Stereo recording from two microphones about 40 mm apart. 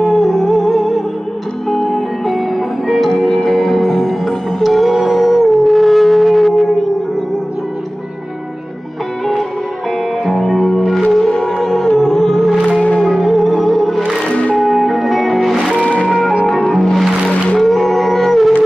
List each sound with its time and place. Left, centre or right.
0.0 s music: centre
2.5 s music: centre
3.2 s music: centre
3.4 s music: centre
10.2 s music: centre
15.8 s music: left
16.4 s music: centre